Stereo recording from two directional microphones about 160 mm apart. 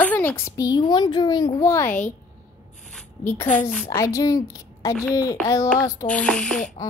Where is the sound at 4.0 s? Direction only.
20° left (ahead or behind); by 6.7 s 5° left (ahead or behind).